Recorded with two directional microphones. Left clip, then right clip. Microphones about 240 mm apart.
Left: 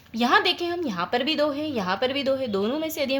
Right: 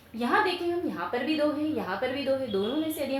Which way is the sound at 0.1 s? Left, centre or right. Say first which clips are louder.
Left 5 dB; left.